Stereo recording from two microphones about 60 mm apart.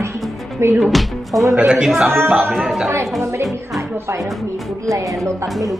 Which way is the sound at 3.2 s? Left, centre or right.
Right.